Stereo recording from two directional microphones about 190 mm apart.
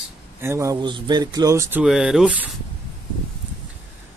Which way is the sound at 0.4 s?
15° right (ahead or behind).